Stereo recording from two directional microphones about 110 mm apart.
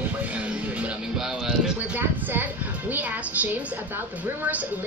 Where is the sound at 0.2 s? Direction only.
10° right (ahead or behind).